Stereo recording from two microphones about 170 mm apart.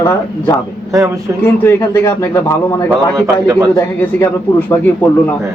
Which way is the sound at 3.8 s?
15° left (ahead or behind).